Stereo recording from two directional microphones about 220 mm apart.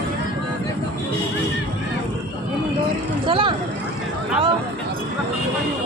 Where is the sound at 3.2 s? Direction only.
20° right (ahead or behind).